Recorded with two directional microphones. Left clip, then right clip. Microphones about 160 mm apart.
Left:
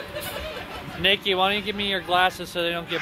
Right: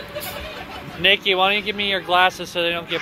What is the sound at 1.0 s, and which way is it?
Speech, 30° left (ahead or behind).